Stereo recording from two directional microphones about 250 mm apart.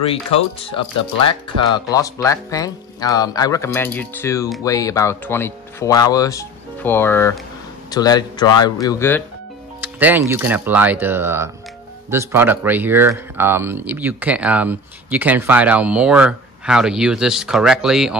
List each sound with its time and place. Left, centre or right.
0.1 s speech: left
9.8 s speech: centre